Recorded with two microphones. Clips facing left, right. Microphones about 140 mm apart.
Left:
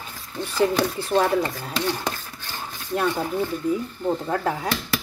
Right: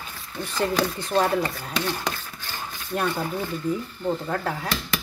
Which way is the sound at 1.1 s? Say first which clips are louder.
Left 2 dB; 20° left (ahead or behind).